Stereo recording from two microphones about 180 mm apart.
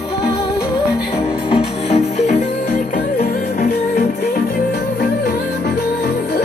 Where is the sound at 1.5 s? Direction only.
35° left (ahead or behind).